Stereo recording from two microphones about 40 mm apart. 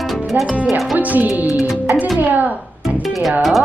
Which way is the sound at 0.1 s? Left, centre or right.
Centre.